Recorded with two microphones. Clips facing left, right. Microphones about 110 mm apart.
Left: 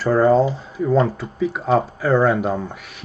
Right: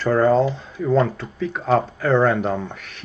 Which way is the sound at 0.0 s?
5° left (ahead or behind).